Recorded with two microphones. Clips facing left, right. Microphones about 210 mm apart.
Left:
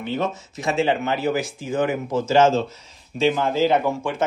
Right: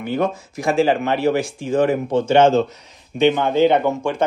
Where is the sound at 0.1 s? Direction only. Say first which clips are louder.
Right 5 dB; centre (ahead or behind).